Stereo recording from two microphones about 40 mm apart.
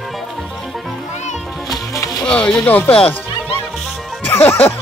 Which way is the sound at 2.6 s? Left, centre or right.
Left.